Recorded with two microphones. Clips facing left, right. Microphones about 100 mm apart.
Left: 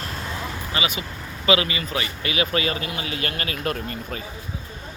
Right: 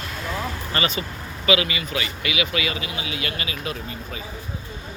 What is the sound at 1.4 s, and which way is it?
Speech, 30° left (ahead or behind).